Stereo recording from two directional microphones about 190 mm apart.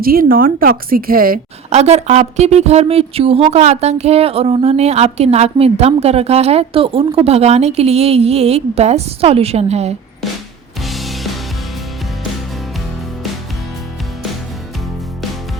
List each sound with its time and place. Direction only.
0.0 s speech: 50° right (ahead or behind)
1.7 s a woman's voice: 35° right (ahead or behind)
10.8 s music: centre (ahead or behind)